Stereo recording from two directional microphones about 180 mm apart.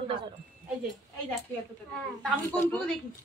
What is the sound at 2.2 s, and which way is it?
Speech, 10° left (ahead or behind).